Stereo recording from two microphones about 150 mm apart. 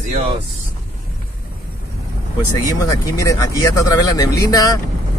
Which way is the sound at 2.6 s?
25° left (ahead or behind).